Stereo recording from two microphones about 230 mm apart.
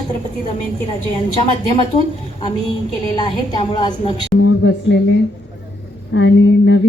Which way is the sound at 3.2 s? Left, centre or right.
Centre.